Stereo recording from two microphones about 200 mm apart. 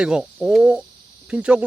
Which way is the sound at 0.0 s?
5° right (ahead or behind).